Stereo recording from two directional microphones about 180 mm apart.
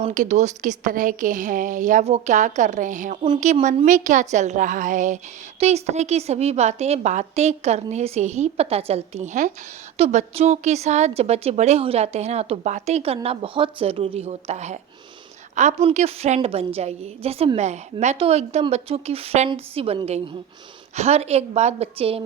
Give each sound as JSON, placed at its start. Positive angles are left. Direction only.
{"t": 0.0, "sound": "a woman's voice", "side_deg": -40}